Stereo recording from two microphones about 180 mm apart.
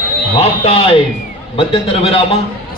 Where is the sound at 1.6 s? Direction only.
30° left (ahead or behind).